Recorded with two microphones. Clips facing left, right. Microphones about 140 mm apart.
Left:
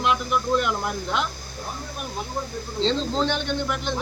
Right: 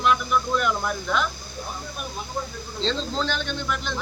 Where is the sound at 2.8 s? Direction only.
20° left (ahead or behind).